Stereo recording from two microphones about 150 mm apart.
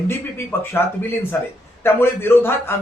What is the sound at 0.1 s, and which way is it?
Speech, 15° left (ahead or behind).